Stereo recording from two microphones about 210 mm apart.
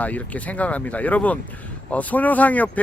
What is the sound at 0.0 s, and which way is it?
Speech, 5° left (ahead or behind).